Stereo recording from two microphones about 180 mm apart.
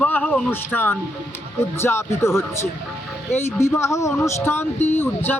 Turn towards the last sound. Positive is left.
turn(degrees=10)  # may be behind; listen again after turning